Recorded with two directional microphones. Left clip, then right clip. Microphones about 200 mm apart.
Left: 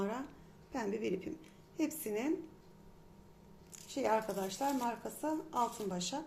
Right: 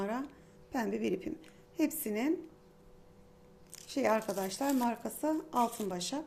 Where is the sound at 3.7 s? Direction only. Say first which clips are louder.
Right 3 dB; 30° right (ahead or behind).